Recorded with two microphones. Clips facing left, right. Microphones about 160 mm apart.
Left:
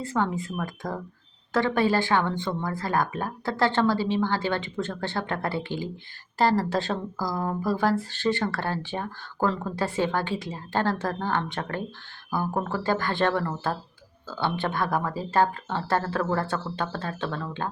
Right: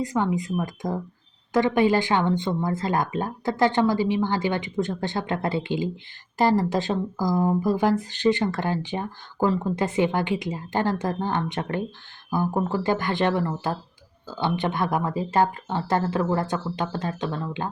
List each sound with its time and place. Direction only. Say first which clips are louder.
0.0 s speech: right 3 dB; 15° right (ahead or behind)